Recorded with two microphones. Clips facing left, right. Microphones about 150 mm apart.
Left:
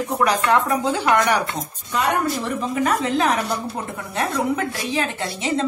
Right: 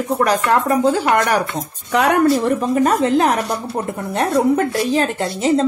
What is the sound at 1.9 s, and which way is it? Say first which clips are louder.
Speech: right 7 dB; 70° right (ahead or behind).